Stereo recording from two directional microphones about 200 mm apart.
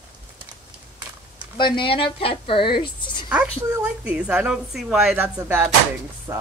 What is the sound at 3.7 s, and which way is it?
A woman's voice, 10° right (ahead or behind).